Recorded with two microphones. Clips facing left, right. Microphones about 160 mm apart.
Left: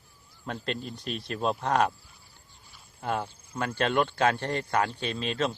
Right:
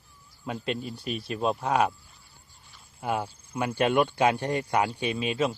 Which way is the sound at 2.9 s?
10° right (ahead or behind).